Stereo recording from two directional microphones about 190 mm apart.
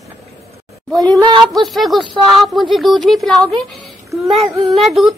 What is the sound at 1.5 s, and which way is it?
Speech, centre (ahead or behind).